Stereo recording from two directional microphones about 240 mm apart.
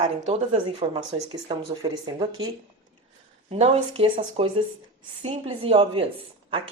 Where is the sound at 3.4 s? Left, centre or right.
Right.